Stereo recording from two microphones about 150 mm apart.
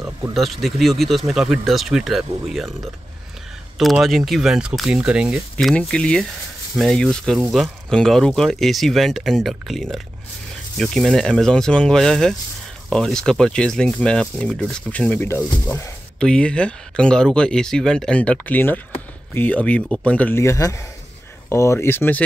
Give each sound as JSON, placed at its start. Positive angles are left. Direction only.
{"t": 0.3, "sound": "speech", "side_deg": 0}